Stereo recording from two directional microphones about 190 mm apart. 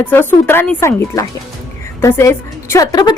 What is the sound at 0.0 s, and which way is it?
A woman's voice, 10° left (ahead or behind).